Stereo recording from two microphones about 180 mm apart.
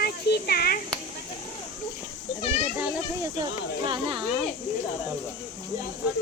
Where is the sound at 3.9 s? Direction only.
30° right (ahead or behind).